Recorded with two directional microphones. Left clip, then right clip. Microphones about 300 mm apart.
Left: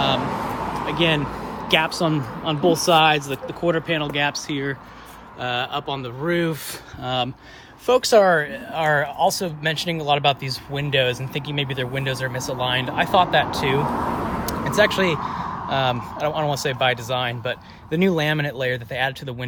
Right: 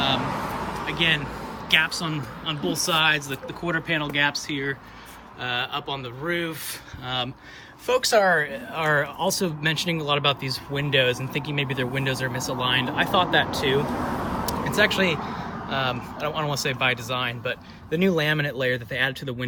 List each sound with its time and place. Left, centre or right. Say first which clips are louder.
0.2 s vehicle: left 3 dB; left
0.9 s vehicle: left 2 dB; centre
1.4 s speech: left 1 dB; centre
14.4 s vehicle: left 3 dB; centre
15.7 s speech: left 4 dB; centre